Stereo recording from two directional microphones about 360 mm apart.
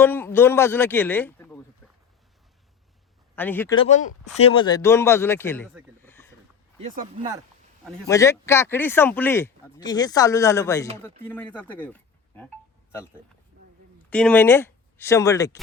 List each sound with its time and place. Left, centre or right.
0.0 s speech: centre
3.3 s speech: centre
6.0 s a sound: centre
6.7 s speech: right
7.9 s speech: centre
14.1 s speech: centre